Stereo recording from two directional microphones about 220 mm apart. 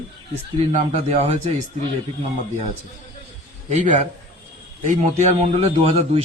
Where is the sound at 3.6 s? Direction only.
35° right (ahead or behind).